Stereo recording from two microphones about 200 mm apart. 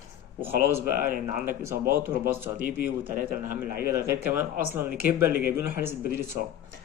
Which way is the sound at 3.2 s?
45° right (ahead or behind).